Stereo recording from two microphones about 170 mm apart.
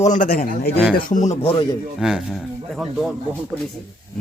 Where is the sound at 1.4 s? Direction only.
25° left (ahead or behind).